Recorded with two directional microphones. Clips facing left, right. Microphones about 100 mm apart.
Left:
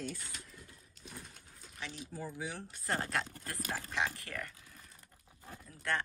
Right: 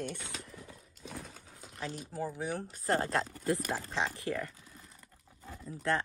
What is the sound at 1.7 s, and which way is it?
Speech, 40° right (ahead or behind).